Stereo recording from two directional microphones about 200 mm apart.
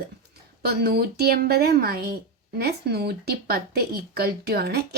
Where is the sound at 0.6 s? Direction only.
50° right (ahead or behind).